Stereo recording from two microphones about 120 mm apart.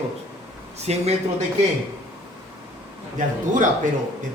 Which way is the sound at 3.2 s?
90° right.